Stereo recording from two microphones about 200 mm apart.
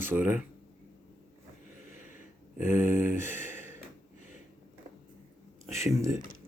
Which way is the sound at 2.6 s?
40° left (ahead or behind).